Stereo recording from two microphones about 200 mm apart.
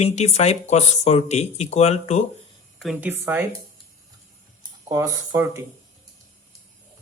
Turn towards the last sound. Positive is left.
turn(degrees=-15)  # may be behind; listen again after turning